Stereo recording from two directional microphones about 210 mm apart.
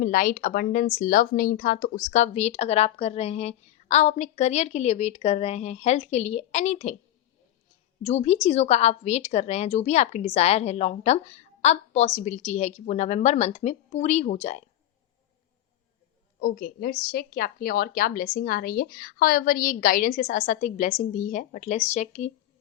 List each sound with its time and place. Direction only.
0.0 s speech: 40° left (ahead or behind)
8.0 s speech: 30° left (ahead or behind)
16.4 s a woman's voice: 45° left (ahead or behind)